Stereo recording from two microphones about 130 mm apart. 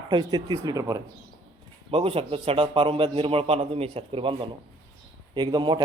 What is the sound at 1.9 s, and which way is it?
A man's voice, 45° right (ahead or behind).